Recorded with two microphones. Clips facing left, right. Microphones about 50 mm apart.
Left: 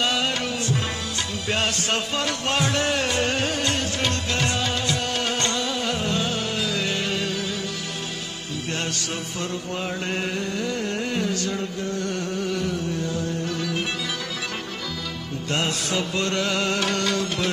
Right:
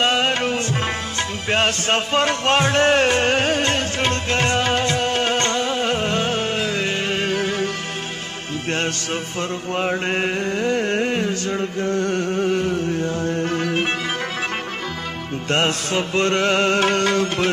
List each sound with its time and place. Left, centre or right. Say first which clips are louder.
0.0 s music: right 5 dB; right
9.8 s music: right 8 dB; right
15.5 s music: right 5 dB; right